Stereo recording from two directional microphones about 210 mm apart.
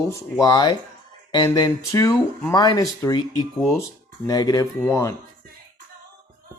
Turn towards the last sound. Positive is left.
turn(degrees=15)  # may be behind; listen again after turning